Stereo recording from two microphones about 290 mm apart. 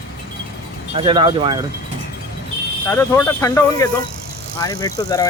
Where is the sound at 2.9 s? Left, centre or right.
Centre.